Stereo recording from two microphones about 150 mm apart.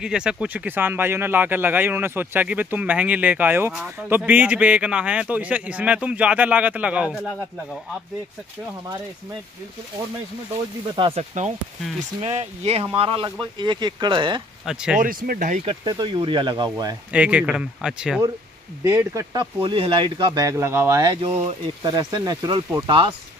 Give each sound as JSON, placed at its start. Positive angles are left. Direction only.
{"t": 0.0, "sound": "speech", "side_deg": -5}
{"t": 11.0, "sound": "speech", "side_deg": -35}
{"t": 14.7, "sound": "speech", "side_deg": -5}
{"t": 15.0, "sound": "speech", "side_deg": -70}
{"t": 15.6, "sound": "speech", "side_deg": -35}
{"t": 17.1, "sound": "speech", "side_deg": -10}
{"t": 18.9, "sound": "speech", "side_deg": -15}
{"t": 19.3, "sound": "speech", "side_deg": -35}
{"t": 21.2, "sound": "speech", "side_deg": -45}
{"t": 21.8, "sound": "speech", "side_deg": -25}